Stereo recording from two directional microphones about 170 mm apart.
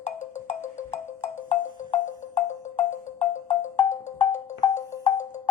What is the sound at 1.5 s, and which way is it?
Music, 45° left (ahead or behind).